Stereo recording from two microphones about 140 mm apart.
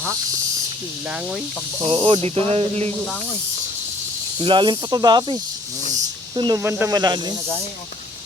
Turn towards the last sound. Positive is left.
turn(degrees=-30)  # may be behind; listen again after turning